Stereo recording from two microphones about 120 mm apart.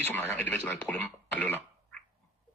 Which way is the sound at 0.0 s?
15° left (ahead or behind).